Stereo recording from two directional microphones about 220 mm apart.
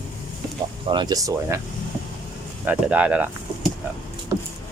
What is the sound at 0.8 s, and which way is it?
Speech, 20° right (ahead or behind).